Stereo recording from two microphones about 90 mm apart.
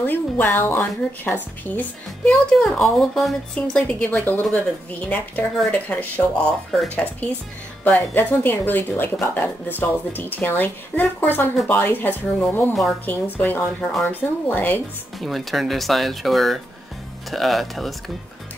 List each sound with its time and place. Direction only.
0.0 s speech: 20° left (ahead or behind)
2.2 s a woman's voice: 5° left (ahead or behind)
5.7 s a woman's voice: 15° left (ahead or behind)
6.7 s speech: 5° left (ahead or behind)
7.8 s speech: 20° left (ahead or behind)
15.1 s speech: centre (ahead or behind)